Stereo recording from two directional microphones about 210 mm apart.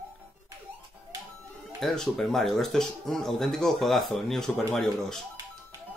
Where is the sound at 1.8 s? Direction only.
Centre (ahead or behind).